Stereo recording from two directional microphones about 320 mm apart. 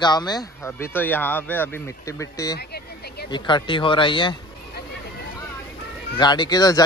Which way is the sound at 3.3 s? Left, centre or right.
Centre.